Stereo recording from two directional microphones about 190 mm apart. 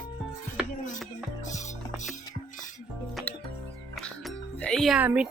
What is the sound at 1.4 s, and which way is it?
Music, 40° left (ahead or behind).